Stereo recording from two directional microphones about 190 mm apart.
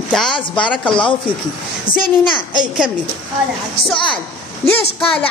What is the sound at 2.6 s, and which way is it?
A woman's voice, 5° right (ahead or behind).